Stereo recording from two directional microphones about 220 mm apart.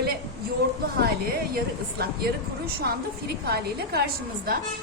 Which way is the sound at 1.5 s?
45° right (ahead or behind).